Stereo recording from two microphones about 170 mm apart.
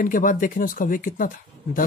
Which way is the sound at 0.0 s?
50° left (ahead or behind).